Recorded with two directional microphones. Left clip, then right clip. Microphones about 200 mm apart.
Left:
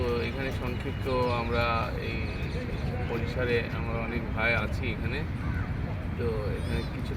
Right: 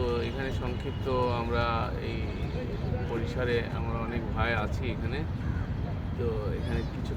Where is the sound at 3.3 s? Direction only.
25° right (ahead or behind).